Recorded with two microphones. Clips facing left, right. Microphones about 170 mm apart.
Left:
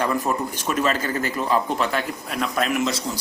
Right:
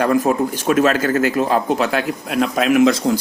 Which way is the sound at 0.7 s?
65° right (ahead or behind).